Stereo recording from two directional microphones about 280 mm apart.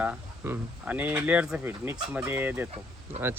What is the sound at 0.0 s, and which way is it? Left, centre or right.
Speech, centre.